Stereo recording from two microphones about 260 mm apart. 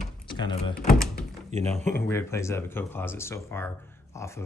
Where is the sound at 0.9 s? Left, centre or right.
Centre.